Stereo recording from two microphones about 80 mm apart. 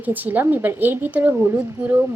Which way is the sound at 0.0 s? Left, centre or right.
Right.